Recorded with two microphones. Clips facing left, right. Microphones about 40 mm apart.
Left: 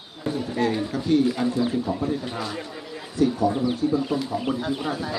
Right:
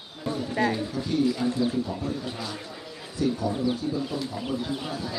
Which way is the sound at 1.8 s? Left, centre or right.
Left.